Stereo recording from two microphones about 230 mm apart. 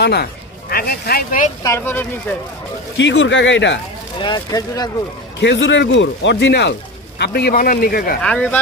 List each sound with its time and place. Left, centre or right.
0.0 s speech: left
1.6 s speech: centre
3.0 s speech: left
4.2 s speech: centre
5.4 s speech: left
8.2 s speech: centre